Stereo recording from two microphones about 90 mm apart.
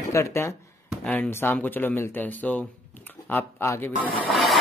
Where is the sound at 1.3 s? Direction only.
25° left (ahead or behind).